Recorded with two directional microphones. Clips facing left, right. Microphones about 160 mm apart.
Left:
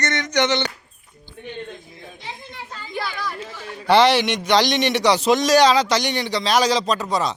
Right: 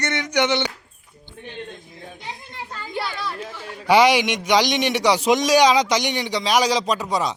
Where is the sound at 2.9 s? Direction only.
25° right (ahead or behind).